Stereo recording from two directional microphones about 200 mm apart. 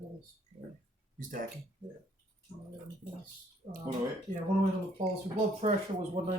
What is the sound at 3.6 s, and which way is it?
Speech, 30° right (ahead or behind).